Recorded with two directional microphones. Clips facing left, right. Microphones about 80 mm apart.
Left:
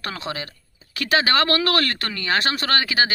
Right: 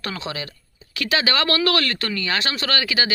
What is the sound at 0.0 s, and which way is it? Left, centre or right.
A man's voice, left.